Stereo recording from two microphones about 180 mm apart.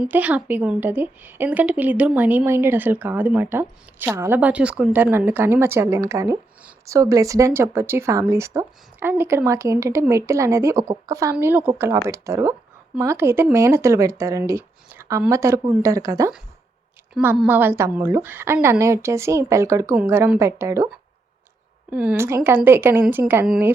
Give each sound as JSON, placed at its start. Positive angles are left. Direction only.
{"t": 0.0, "sound": "a woman's voice", "side_deg": -5}
{"t": 17.2, "sound": "a woman's voice", "side_deg": -5}